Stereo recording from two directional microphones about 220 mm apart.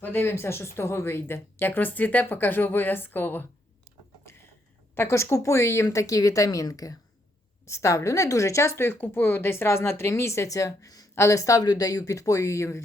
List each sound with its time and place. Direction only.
0.0 s speech: 10° left (ahead or behind)
4.9 s speech: 10° left (ahead or behind)